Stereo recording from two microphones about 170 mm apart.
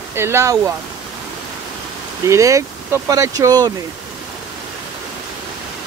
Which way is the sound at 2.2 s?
20° right (ahead or behind).